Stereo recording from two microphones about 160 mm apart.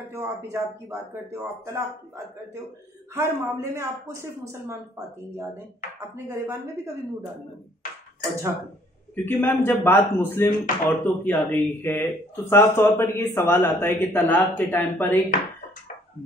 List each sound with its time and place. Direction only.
0.1 s speech: 20° right (ahead or behind)
3.2 s speech: 15° right (ahead or behind)
9.1 s speech: 15° left (ahead or behind)